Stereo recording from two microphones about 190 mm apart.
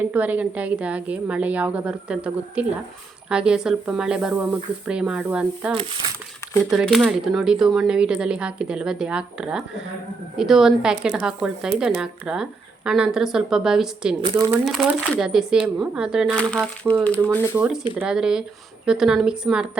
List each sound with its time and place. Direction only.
0.0 s a woman's voice: 10° right (ahead or behind)
14.2 s speech: 25° right (ahead or behind)
14.6 s speech: centre (ahead or behind)
18.0 s speech: 5° right (ahead or behind)